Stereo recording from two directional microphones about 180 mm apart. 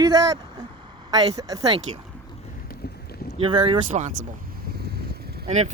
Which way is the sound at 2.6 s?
60° left (ahead or behind).